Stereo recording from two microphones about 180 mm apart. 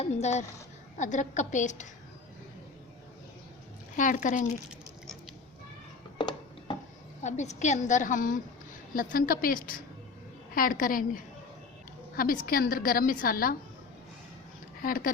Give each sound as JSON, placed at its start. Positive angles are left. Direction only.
{"t": 0.0, "sound": "a woman's voice", "side_deg": 40}
{"t": 3.9, "sound": "a woman's voice", "side_deg": 45}
{"t": 6.1, "sound": "music", "side_deg": 25}
{"t": 7.2, "sound": "a woman's voice", "side_deg": 40}
{"t": 12.1, "sound": "a woman's voice", "side_deg": 50}
{"t": 14.8, "sound": "a woman's voice", "side_deg": 50}